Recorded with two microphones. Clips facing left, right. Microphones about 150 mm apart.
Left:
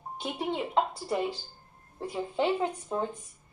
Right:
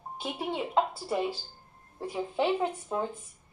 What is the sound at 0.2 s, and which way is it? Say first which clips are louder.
A woman's voice: left 1 dB; 5° right (ahead or behind).